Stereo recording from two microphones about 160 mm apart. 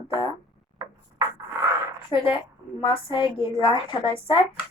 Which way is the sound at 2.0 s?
30° left (ahead or behind).